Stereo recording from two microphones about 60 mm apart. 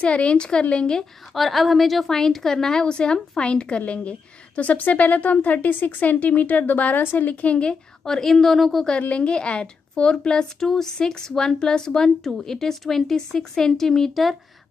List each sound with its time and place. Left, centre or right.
0.0 s a woman's voice: centre
1.3 s a woman's voice: centre; by 7.7 s left
8.0 s a woman's voice: centre
9.1 s a woman's voice: centre